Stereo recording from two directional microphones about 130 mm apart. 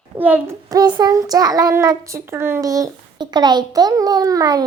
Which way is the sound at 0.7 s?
30° right (ahead or behind).